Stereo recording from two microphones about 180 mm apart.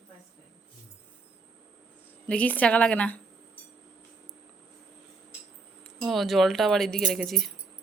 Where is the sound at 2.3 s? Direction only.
5° left (ahead or behind).